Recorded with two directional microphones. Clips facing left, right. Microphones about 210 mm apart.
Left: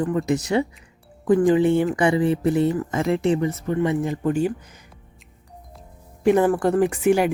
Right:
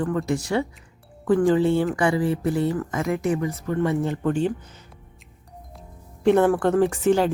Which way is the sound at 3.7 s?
10° left (ahead or behind).